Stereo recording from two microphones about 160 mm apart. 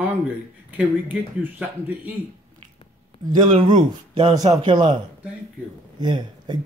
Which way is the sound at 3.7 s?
30° right (ahead or behind).